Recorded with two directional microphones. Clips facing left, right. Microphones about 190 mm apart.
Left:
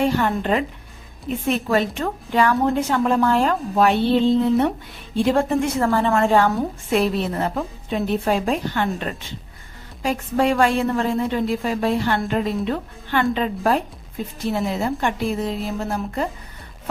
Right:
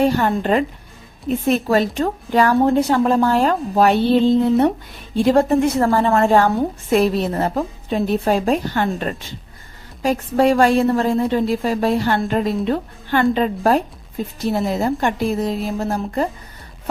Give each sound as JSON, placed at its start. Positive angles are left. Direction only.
{"t": 0.0, "sound": "a woman's voice", "side_deg": -40}